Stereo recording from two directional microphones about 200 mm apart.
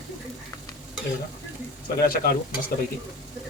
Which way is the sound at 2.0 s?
50° left (ahead or behind).